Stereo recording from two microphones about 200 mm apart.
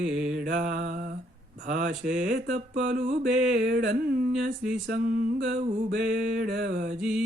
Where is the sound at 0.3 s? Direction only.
45° right (ahead or behind).